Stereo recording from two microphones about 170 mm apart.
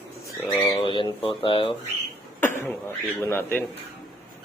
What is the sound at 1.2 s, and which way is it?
Speech, 30° left (ahead or behind).